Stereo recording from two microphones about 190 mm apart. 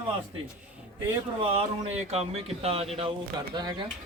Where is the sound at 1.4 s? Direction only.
30° right (ahead or behind).